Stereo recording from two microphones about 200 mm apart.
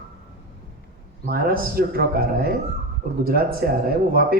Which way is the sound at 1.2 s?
50° right (ahead or behind).